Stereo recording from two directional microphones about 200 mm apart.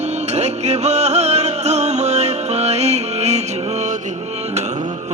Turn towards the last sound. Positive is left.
turn(degrees=-35)  # may be behind; listen again after turning